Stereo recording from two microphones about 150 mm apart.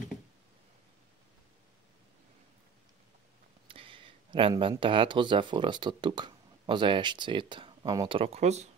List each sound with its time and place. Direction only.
3.6 s speech: 35° right (ahead or behind)